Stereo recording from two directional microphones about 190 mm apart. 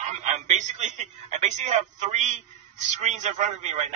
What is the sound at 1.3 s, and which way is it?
A man's voice, 40° right (ahead or behind).